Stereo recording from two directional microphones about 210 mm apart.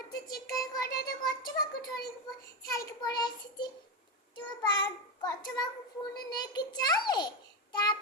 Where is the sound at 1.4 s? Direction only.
20° left (ahead or behind).